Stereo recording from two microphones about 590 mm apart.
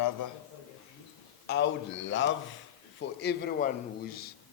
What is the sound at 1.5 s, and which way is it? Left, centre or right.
A man's voice, centre.